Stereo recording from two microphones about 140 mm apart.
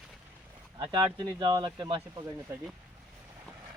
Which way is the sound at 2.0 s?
20° right (ahead or behind).